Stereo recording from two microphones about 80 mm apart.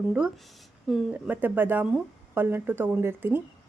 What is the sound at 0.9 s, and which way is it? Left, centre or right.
Speech, centre.